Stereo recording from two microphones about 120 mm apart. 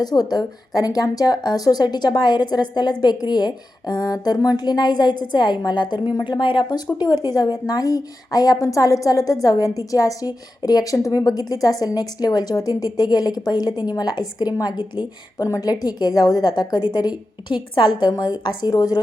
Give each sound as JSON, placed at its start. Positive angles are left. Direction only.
{"t": 0.0, "sound": "a woman's voice", "side_deg": 35}